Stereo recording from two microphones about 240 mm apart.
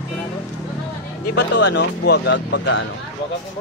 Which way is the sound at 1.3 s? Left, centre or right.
Left.